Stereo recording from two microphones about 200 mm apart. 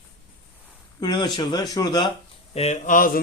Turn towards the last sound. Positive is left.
turn(degrees=40)  # may be behind; listen again after turning